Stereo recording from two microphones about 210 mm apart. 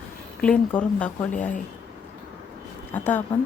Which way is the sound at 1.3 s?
35° left (ahead or behind).